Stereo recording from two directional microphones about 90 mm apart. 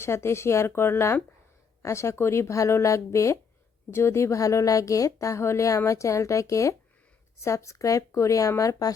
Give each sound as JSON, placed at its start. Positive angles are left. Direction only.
{"t": 0.0, "sound": "speech", "side_deg": 30}